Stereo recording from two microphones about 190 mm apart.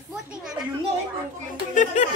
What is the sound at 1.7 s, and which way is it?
Speech, 35° left (ahead or behind).